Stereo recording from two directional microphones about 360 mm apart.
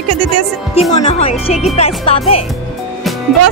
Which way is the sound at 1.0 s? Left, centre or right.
Centre.